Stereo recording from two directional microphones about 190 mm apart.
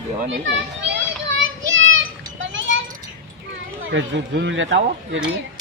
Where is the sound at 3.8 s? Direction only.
75° right (ahead or behind).